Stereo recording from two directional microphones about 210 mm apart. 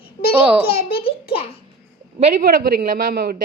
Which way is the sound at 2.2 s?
40° right (ahead or behind).